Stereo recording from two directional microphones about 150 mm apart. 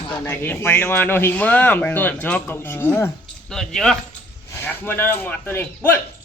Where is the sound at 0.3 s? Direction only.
15° left (ahead or behind).